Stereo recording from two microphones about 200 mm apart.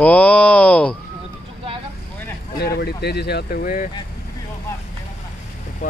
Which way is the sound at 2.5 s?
55° left (ahead or behind).